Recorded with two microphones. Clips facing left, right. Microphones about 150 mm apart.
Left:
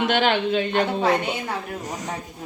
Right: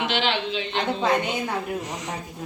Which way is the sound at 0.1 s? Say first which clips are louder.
Left 5 dB; 50° left (ahead or behind).